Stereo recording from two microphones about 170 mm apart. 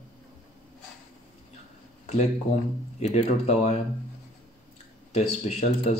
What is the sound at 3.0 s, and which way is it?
Speech, 40° left (ahead or behind).